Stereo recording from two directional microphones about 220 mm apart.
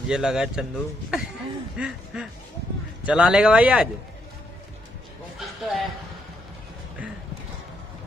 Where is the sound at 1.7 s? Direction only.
5° right (ahead or behind).